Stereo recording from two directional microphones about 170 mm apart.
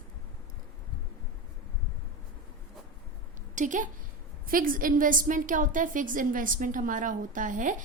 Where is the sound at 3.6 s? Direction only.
50° right (ahead or behind).